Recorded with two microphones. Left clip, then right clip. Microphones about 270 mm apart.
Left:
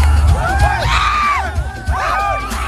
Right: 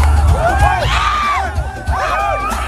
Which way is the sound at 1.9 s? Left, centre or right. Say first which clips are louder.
Even; centre.